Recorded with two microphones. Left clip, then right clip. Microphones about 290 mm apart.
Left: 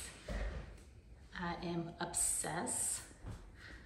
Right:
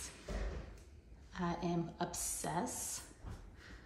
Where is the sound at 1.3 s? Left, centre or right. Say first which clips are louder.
Right 2 dB; centre.